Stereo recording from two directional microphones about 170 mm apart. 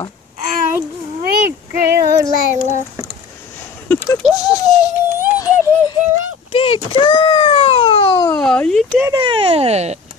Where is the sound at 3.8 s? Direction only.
10° left (ahead or behind).